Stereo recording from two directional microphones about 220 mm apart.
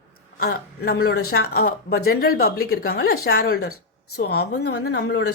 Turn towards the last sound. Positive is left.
turn(degrees=50)  # may be behind; listen again after turning